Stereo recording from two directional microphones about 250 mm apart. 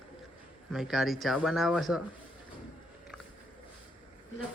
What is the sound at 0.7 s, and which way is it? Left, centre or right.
Speech, centre.